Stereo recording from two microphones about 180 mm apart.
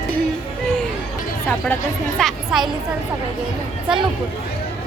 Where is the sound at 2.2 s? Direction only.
Centre (ahead or behind).